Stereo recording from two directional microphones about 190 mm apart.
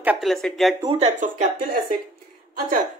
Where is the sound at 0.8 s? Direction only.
35° right (ahead or behind).